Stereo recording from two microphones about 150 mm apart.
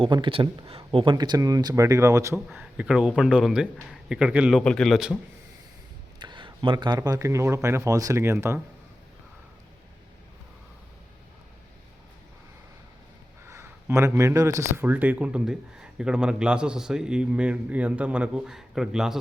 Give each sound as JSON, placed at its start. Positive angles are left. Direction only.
{"t": 0.0, "sound": "speech", "side_deg": -35}
{"t": 2.5, "sound": "speech", "side_deg": -5}
{"t": 4.6, "sound": "a man's voice", "side_deg": 5}
{"t": 6.1, "sound": "speech", "side_deg": -30}
{"t": 13.5, "sound": "speech", "side_deg": -15}